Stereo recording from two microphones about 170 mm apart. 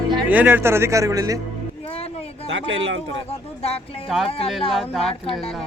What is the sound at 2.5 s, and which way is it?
Speech, 90° right.